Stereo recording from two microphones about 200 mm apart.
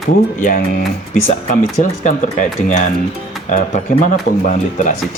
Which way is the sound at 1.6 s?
40° left (ahead or behind).